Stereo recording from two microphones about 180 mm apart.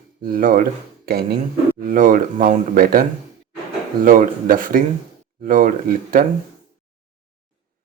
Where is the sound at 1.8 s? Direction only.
50° right (ahead or behind).